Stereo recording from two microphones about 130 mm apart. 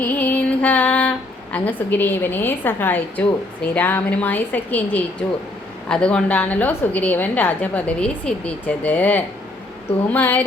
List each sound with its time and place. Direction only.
0.0 s female singing: 15° left (ahead or behind)
1.5 s a woman's voice: 15° left (ahead or behind)